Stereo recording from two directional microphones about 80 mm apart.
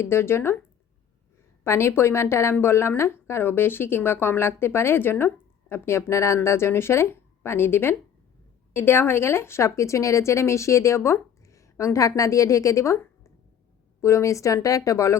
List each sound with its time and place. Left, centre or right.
0.0 s a woman's voice: left
1.6 s a woman's voice: left
14.0 s a woman's voice: left